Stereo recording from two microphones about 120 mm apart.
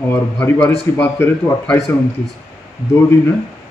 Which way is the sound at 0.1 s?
20° left (ahead or behind).